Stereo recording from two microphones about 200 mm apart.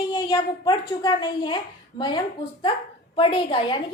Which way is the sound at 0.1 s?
20° left (ahead or behind).